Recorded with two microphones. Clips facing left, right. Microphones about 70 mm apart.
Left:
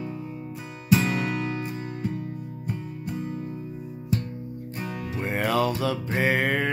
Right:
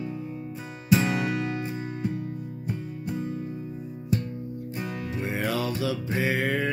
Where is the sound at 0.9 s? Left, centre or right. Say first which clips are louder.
Even; centre.